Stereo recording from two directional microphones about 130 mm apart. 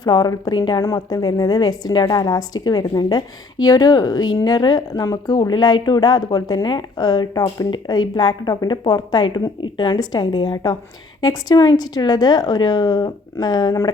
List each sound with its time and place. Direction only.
0.0 s a woman's voice: 30° left (ahead or behind)